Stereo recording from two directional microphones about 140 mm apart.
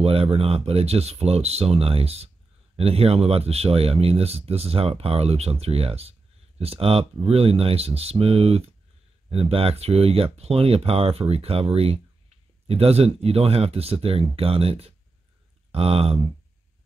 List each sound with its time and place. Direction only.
0.0 s speech: 45° right (ahead or behind)